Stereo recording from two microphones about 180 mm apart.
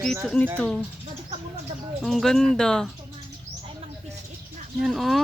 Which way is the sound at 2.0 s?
Centre (ahead or behind).